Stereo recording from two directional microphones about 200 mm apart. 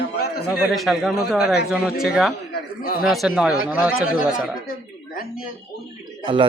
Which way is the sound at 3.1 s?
Centre (ahead or behind).